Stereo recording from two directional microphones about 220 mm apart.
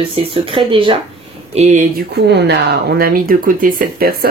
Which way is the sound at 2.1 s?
50° right (ahead or behind).